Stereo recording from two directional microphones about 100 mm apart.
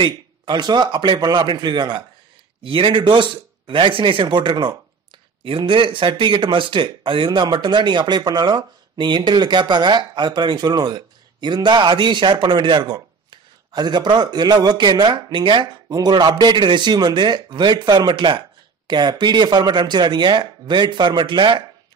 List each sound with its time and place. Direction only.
0.0 s speech: 50° right (ahead or behind)